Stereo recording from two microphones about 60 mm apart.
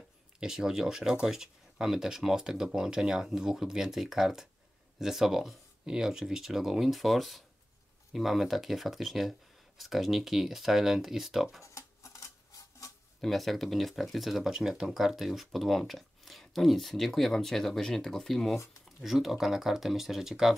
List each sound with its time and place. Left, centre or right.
0.4 s speech: centre
11.6 s a sound: left
13.2 s speech: centre